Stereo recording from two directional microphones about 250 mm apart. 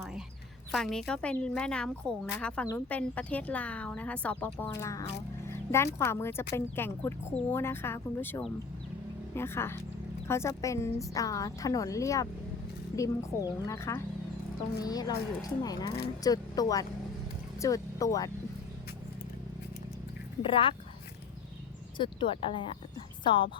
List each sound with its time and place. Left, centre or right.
0.7 s a woman's voice: centre
20.4 s speech: left
21.9 s speech: centre